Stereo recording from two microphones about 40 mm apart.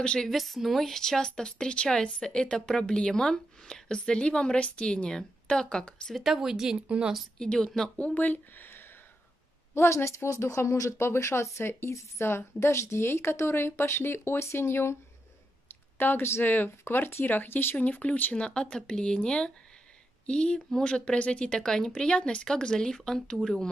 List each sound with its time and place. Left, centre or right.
0.0 s speech: left
0.3 s speech: centre; by 6.1 s left
6.1 s a woman's voice: centre
7.3 s speech: centre
8.0 s speech: left
10.2 s speech: left
10.6 s speech: left
16.0 s speech: left
16.4 s speech: left
17.7 s speech: left
18.4 s speech: left